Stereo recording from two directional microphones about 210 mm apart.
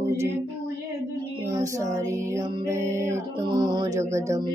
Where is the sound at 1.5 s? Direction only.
15° right (ahead or behind).